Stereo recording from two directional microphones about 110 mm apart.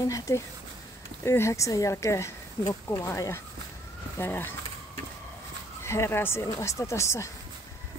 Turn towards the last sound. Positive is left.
turn(degrees=25)  # may be behind; listen again after turning